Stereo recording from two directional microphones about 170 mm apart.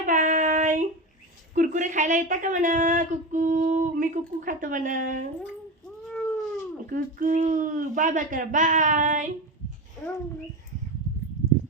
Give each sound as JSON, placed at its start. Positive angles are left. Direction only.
{"t": 0.0, "sound": "child singing", "side_deg": -45}
{"t": 1.5, "sound": "a child's voice", "side_deg": -45}
{"t": 6.1, "sound": "cat", "side_deg": 5}
{"t": 6.9, "sound": "a child's voice", "side_deg": -50}